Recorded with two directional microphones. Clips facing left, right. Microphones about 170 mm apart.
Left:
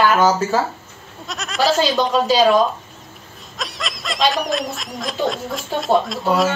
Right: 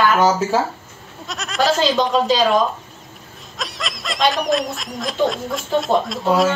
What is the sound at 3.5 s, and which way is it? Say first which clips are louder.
Speech: even; centre (ahead or behind).